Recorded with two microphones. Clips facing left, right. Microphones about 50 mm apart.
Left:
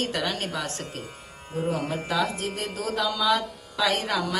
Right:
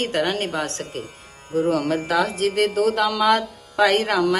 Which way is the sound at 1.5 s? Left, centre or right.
Right.